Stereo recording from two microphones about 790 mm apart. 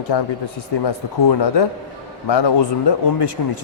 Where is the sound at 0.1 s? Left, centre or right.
Left.